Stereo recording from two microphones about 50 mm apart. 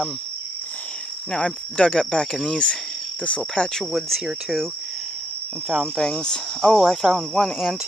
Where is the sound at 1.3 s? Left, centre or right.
Left.